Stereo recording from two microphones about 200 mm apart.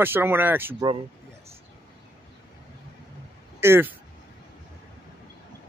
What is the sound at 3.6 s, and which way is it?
Speech, 10° right (ahead or behind).